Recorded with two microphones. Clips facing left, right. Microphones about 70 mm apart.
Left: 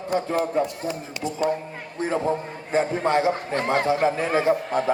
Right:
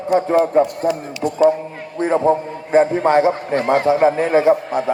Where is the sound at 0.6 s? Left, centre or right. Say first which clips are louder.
Right 9 dB; right.